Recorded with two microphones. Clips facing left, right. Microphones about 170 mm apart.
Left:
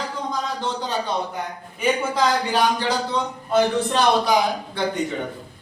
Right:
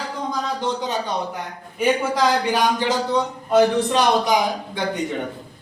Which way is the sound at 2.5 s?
15° right (ahead or behind).